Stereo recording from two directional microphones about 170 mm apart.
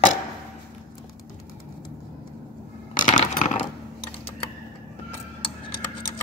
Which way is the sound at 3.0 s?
50° left (ahead or behind).